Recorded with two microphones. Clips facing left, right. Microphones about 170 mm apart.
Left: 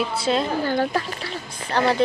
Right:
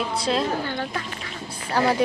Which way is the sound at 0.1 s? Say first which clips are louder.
Left 2 dB; centre (ahead or behind).